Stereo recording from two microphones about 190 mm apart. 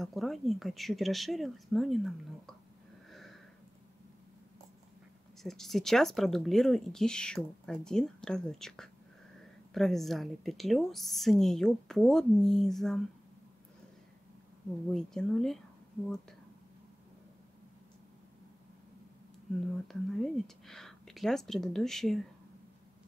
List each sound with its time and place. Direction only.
0.0 s speech: centre (ahead or behind)
3.1 s a sound: centre (ahead or behind)
5.4 s speech: centre (ahead or behind)
14.9 s speech: 5° left (ahead or behind)
19.7 s speech: centre (ahead or behind)